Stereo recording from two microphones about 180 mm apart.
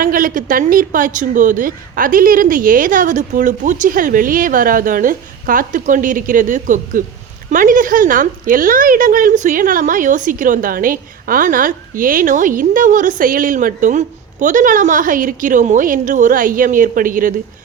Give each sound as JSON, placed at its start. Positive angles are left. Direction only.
{"t": 0.0, "sound": "a woman's voice", "side_deg": -50}